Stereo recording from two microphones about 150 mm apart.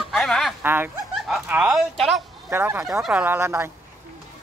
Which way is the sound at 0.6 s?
15° right (ahead or behind).